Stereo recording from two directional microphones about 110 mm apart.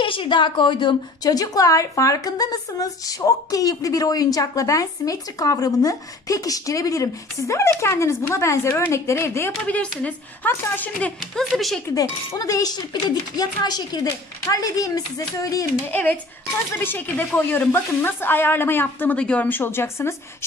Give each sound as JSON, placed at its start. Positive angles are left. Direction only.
{"t": 0.0, "sound": "a woman's voice", "side_deg": 50}
{"t": 1.3, "sound": "speech", "side_deg": 35}
{"t": 9.5, "sound": "speech", "side_deg": 10}
{"t": 11.1, "sound": "speech", "side_deg": 0}
{"t": 11.9, "sound": "speech", "side_deg": 35}
{"t": 15.9, "sound": "speech", "side_deg": 15}